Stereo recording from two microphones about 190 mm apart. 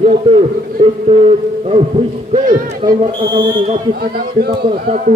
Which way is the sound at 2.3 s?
45° right (ahead or behind).